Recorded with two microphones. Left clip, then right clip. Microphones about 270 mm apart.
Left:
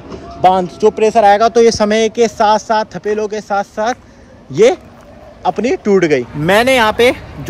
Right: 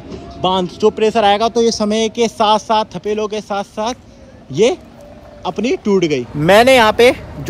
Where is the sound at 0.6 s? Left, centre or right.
Centre.